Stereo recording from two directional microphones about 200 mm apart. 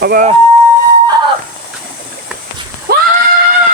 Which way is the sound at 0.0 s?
45° right (ahead or behind).